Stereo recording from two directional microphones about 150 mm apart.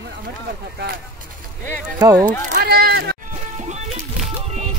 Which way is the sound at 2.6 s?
90° right.